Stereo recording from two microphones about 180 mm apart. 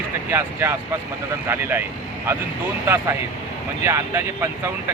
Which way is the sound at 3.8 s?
15° right (ahead or behind).